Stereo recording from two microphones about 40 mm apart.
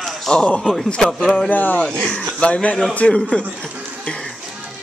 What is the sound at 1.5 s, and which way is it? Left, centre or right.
Speech, left.